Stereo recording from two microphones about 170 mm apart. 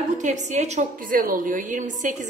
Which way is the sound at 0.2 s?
45° right (ahead or behind).